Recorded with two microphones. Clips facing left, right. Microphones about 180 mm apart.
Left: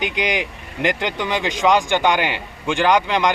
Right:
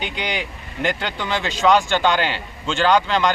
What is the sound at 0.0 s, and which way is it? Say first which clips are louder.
Speech: left 4 dB; 15° left (ahead or behind).